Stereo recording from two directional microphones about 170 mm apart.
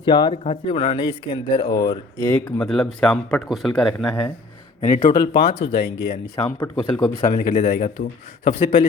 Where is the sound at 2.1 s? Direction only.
10° left (ahead or behind).